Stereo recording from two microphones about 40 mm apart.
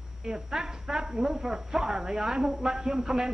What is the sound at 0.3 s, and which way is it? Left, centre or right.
Speech, centre.